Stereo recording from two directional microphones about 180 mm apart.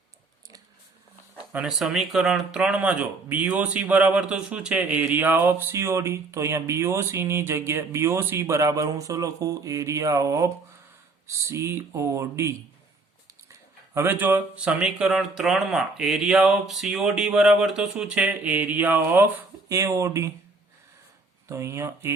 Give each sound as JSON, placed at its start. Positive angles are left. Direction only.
{"t": 1.5, "sound": "speech", "side_deg": -5}
{"t": 21.5, "sound": "speech", "side_deg": -15}